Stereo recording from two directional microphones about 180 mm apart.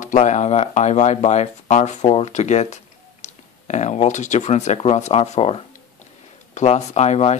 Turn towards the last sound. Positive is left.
turn(degrees=35)  # may be behind; listen again after turning